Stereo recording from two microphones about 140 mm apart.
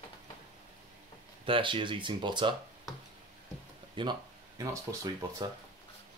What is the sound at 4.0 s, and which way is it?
Speech, 30° right (ahead or behind).